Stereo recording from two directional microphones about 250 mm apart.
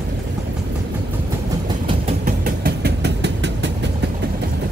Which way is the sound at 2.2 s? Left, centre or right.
Right.